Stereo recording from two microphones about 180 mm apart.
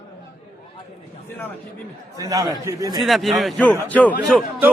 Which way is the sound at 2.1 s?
20° right (ahead or behind).